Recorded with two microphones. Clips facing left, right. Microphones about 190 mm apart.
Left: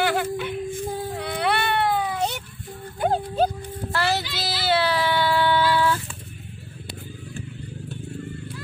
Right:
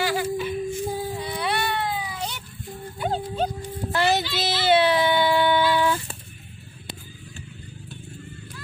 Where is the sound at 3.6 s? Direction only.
20° right (ahead or behind).